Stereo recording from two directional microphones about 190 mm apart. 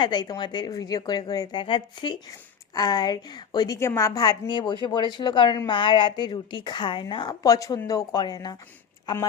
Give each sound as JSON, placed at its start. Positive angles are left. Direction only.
{"t": 0.0, "sound": "a woman's voice", "side_deg": 20}